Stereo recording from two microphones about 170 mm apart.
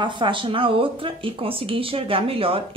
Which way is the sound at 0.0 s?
30° right (ahead or behind).